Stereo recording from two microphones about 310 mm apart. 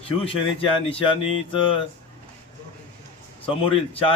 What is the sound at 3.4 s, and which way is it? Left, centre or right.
Speech, centre.